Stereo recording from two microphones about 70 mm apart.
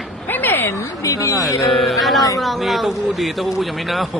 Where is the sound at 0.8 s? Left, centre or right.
Left.